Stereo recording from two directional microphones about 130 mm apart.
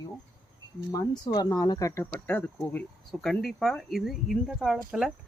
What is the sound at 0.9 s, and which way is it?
Speech, 30° left (ahead or behind).